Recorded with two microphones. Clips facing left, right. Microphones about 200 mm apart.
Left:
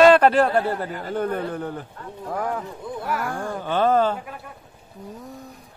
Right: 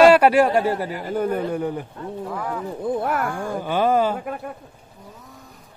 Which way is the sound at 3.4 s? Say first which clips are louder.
Left 1 dB; 10° right (ahead or behind).